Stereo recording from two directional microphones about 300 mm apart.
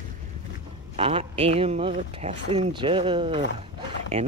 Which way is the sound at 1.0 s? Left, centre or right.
Centre.